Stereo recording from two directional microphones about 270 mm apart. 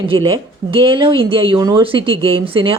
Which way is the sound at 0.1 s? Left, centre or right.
Centre.